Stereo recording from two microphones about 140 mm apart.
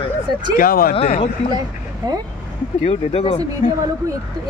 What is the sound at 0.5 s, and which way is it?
Speech, 90° left.